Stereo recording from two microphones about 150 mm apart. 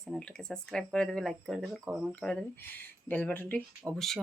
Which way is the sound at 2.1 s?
5° left (ahead or behind).